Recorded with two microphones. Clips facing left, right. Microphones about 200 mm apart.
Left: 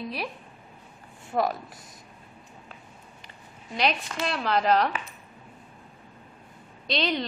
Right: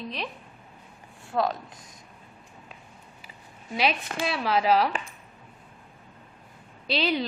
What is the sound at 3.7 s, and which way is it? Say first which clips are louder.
A woman's voice: even; 5° right (ahead or behind).